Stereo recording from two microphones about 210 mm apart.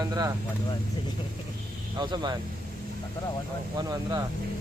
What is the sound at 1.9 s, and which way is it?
Speech, 20° right (ahead or behind).